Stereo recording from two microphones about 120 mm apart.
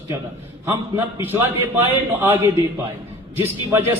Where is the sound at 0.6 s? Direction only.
20° right (ahead or behind).